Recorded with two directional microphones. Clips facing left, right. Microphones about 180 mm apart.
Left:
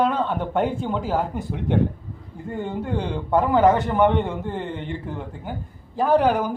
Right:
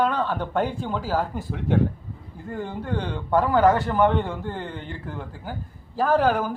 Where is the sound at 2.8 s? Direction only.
5° left (ahead or behind).